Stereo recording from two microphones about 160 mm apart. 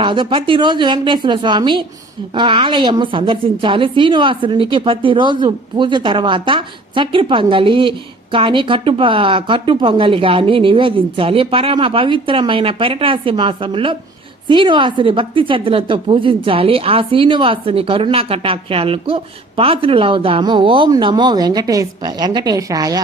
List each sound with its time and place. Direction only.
0.0 s a woman's voice: 30° right (ahead or behind)